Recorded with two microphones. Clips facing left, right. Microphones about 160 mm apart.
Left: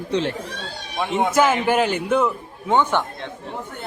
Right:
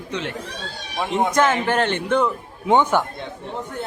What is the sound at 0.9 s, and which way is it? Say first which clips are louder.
A man's voice: left 1 dB; centre (ahead or behind).